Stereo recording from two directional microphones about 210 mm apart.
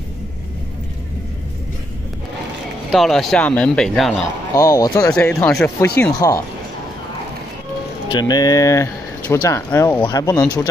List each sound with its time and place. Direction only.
2.9 s speech: centre (ahead or behind)
4.6 s speech: 15° left (ahead or behind)
6.1 s speech: 15° left (ahead or behind)
8.1 s speech: 20° left (ahead or behind)
10.0 s speech: 20° left (ahead or behind)